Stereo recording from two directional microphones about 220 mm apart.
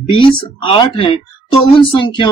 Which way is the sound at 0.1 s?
25° left (ahead or behind).